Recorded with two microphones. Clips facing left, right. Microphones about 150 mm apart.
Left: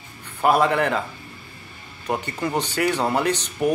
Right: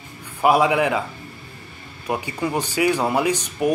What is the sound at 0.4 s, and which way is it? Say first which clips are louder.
Speech: right 2 dB; 10° right (ahead or behind).